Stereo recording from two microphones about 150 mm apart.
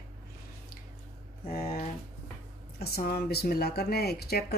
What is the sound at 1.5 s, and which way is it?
Speech, 80° left.